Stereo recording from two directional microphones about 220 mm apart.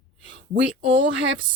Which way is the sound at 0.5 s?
55° right (ahead or behind).